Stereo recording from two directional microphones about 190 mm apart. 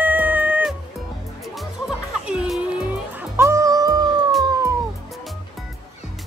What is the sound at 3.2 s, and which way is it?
Music, 15° right (ahead or behind).